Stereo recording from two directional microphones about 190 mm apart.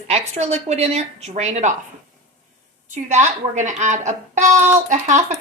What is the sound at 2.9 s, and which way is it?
Speech, 40° right (ahead or behind).